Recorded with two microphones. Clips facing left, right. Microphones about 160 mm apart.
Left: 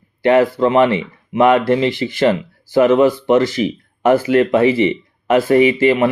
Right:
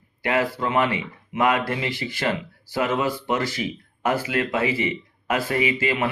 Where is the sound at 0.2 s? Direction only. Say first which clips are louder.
Left 11 dB; 30° left (ahead or behind).